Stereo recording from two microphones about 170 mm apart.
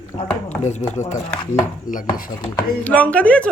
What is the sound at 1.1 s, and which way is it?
Speech, 45° left (ahead or behind).